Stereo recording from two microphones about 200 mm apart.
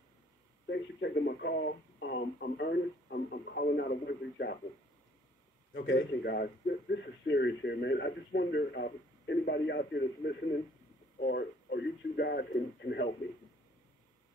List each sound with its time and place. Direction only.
0.7 s speech: 60° left (ahead or behind)
5.7 s speech: 65° left (ahead or behind)